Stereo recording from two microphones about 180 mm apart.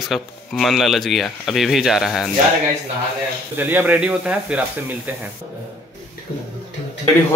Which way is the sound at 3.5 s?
10° right (ahead or behind).